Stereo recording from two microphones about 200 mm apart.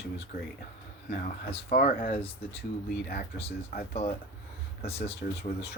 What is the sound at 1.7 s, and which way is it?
Speech, 45° left (ahead or behind).